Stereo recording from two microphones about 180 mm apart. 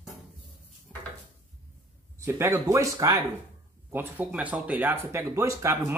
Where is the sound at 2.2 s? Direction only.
15° right (ahead or behind).